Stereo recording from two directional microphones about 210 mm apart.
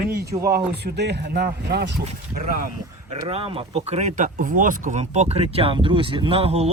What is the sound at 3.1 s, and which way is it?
Speech, 25° right (ahead or behind).